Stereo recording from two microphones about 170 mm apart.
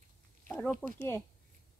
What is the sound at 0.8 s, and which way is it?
Speech, 10° right (ahead or behind).